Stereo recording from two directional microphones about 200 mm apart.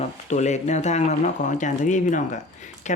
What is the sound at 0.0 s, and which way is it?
Speech, 35° left (ahead or behind).